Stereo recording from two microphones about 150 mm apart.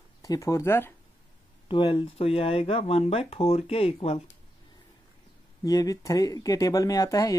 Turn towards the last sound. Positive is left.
turn(degrees=25)  # may be behind; listen again after turning